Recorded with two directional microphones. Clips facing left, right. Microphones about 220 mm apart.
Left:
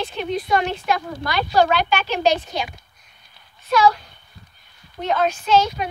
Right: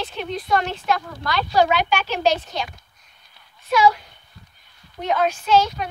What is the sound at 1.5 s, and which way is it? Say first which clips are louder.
Speech: left 1 dB; 15° right (ahead or behind).